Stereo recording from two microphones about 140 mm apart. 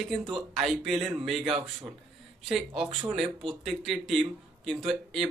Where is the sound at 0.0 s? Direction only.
Centre (ahead or behind).